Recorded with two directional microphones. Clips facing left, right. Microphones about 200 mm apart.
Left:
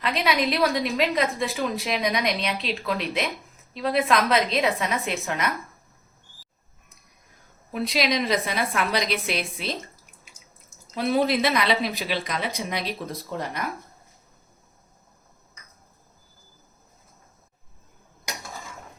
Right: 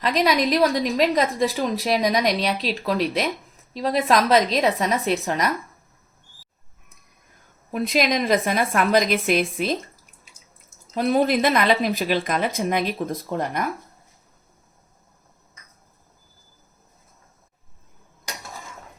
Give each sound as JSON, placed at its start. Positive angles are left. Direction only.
{"t": 0.0, "sound": "speech", "side_deg": -40}
{"t": 7.7, "sound": "speech", "side_deg": -45}
{"t": 10.9, "sound": "speech", "side_deg": -45}